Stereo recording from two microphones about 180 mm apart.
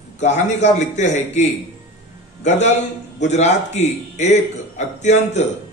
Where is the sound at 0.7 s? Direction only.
40° left (ahead or behind).